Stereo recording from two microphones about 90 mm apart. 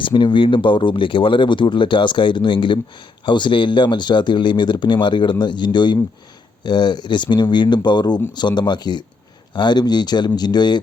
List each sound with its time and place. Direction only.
0.0 s speech: 60° left (ahead or behind)